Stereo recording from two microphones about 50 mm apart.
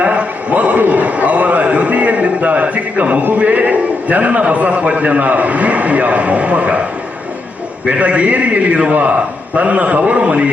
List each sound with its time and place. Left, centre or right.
0.0 s a sound: right
3.3 s a man's voice: right
7.9 s a man's voice: right